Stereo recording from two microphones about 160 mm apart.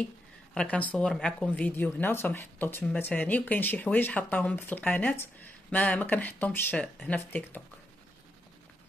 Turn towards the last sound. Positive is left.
turn(degrees=10)  # may be behind; listen again after turning